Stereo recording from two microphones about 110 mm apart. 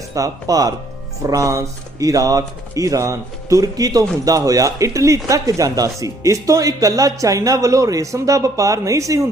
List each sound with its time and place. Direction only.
0.1 s speech: 30° right (ahead or behind)